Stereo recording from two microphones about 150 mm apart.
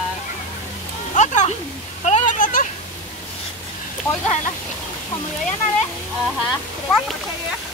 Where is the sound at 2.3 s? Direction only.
65° left (ahead or behind).